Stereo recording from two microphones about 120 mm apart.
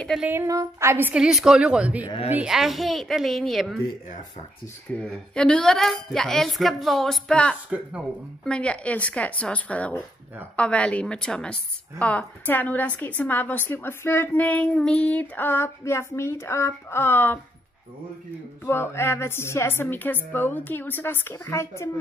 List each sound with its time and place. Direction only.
0.2 s a woman's voice: 20° right (ahead or behind)
1.2 s a woman's voice: 5° right (ahead or behind)
5.0 s a woman's voice: 5° left (ahead or behind)
18.7 s a woman's voice: 20° left (ahead or behind)